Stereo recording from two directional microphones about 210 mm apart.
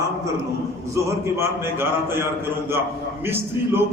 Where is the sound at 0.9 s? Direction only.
10° right (ahead or behind).